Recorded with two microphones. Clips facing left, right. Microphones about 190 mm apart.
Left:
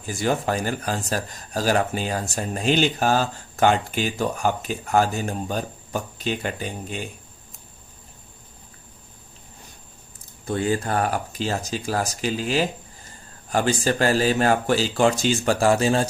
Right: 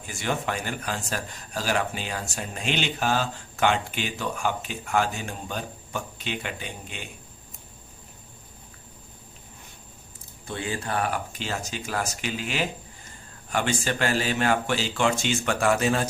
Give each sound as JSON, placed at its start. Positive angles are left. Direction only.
{"t": 0.0, "sound": "speech", "side_deg": 35}
{"t": 10.4, "sound": "speech", "side_deg": 45}